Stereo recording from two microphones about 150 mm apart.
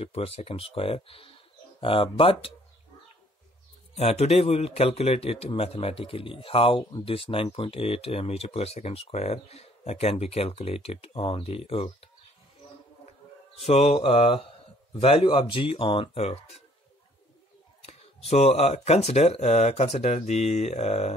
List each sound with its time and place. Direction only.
0.0 s speech: 40° left (ahead or behind)
3.9 s speech: 45° left (ahead or behind)
13.6 s speech: 40° left (ahead or behind)
17.8 s speech: 45° left (ahead or behind)